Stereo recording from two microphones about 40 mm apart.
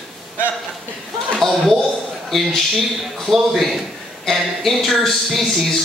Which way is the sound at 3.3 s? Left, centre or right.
Centre.